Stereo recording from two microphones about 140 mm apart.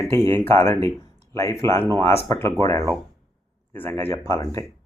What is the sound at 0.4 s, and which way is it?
Speech, 15° left (ahead or behind).